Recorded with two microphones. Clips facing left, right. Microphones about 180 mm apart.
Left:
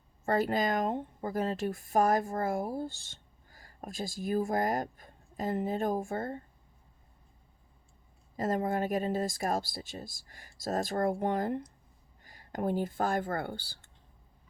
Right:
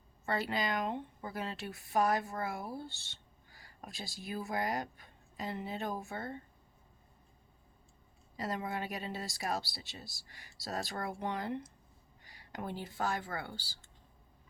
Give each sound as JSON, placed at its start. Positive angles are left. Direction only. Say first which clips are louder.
{"t": 0.3, "sound": "speech", "louder": "left 6 dB", "side_deg": 45}
{"t": 8.4, "sound": "speech", "louder": "left 8 dB", "side_deg": 45}